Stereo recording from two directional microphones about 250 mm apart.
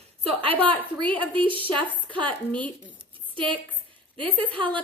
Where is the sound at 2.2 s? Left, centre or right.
Centre.